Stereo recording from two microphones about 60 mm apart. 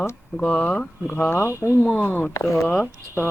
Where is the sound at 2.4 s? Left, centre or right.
Centre.